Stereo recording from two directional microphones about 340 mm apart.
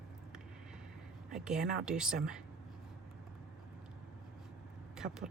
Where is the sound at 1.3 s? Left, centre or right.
Centre.